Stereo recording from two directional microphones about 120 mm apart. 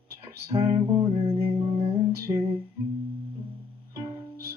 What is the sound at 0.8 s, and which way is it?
Music, 30° right (ahead or behind).